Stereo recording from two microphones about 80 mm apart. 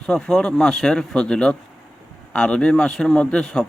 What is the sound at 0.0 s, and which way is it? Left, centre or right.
A man's voice, centre.